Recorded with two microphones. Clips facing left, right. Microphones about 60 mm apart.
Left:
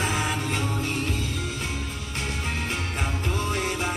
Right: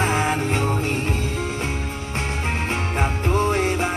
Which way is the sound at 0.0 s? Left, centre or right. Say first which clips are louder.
Right 6 dB; right.